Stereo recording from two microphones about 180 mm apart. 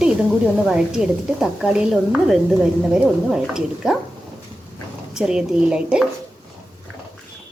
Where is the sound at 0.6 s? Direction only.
5° right (ahead or behind).